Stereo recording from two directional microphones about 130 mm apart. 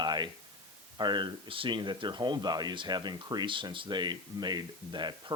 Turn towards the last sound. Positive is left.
turn(degrees=-35)  # may be behind; listen again after turning